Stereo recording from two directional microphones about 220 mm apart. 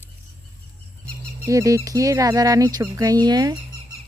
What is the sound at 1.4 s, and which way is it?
Speech, 15° right (ahead or behind).